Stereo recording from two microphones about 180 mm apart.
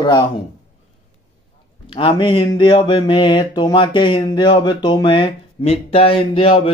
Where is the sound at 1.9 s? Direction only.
30° left (ahead or behind).